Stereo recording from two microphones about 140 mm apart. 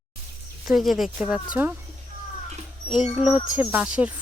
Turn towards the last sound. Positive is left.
turn(degrees=-10)  # may be behind; listen again after turning